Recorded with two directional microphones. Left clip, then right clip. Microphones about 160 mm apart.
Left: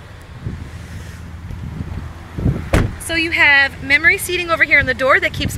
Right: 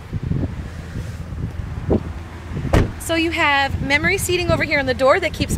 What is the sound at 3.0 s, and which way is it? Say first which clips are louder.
Speech: left 6 dB; 15° right (ahead or behind).